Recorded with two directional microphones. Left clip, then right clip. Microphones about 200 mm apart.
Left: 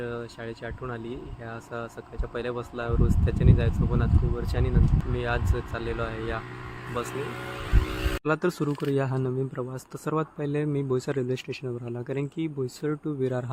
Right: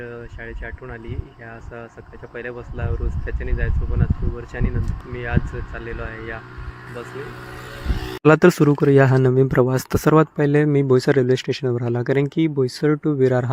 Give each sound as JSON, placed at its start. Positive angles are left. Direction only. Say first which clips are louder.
{"t": 0.0, "sound": "speech", "louder": "right 1 dB", "side_deg": 10}
{"t": 2.3, "sound": "speech", "louder": "even", "side_deg": 10}
{"t": 8.2, "sound": "speech", "louder": "right 14 dB", "side_deg": -40}